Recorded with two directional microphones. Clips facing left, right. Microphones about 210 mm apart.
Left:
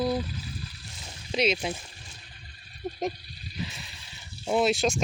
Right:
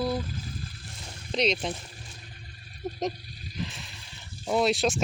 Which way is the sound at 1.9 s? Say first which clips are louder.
Right 4 dB; 45° right (ahead or behind).